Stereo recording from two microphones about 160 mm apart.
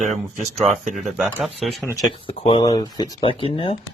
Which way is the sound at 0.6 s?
50° right (ahead or behind).